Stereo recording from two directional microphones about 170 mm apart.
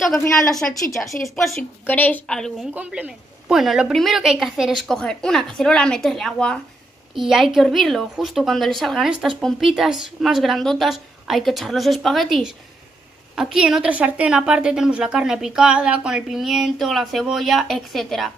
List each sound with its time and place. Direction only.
0.5 s a woman's voice: 5° left (ahead or behind)
2.7 s a woman's voice: 10° right (ahead or behind)